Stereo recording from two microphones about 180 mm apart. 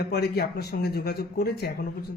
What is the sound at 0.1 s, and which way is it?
Speech, 65° left (ahead or behind).